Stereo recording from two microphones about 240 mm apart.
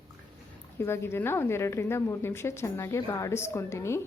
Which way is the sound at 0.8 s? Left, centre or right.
Centre.